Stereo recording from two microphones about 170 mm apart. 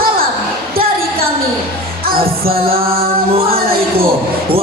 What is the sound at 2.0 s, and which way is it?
Music, 60° right (ahead or behind).